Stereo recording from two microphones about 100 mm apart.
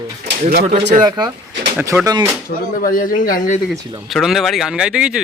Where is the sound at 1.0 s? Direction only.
45° right (ahead or behind).